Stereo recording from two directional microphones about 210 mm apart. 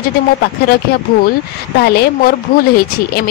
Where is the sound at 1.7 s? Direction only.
50° left (ahead or behind).